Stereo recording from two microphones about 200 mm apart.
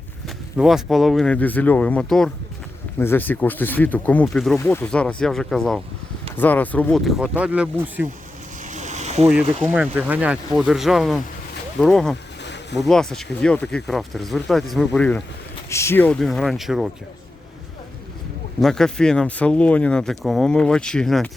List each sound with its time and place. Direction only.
0.5 s speech: centre (ahead or behind)
8.6 s boat: 35° right (ahead or behind)
9.6 s speech: 10° right (ahead or behind)
18.6 s speech: 5° left (ahead or behind)